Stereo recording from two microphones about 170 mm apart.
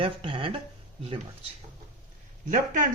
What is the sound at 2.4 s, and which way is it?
Speech, 50° right (ahead or behind).